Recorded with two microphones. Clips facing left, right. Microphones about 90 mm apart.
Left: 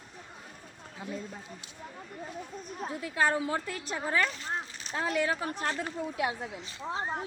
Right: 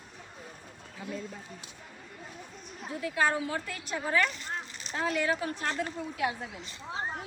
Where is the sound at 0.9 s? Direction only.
15° left (ahead or behind).